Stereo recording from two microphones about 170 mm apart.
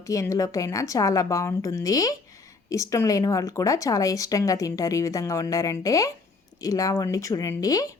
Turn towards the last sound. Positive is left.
turn(degrees=20)  # may be behind; listen again after turning